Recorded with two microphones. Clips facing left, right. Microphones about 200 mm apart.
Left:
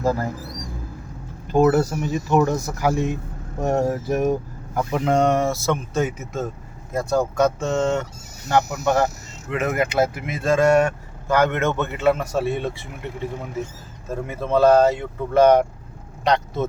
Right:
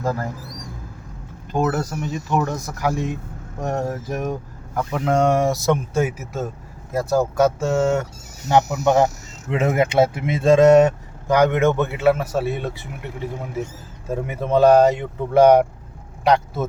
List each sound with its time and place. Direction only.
1.5 s speech: 5° left (ahead or behind)
8.8 s speech: 20° right (ahead or behind); by 12.9 s centre (ahead or behind)
14.1 s speech: 15° right (ahead or behind)